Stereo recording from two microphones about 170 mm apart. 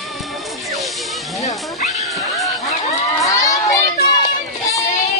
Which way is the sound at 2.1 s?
Centre (ahead or behind).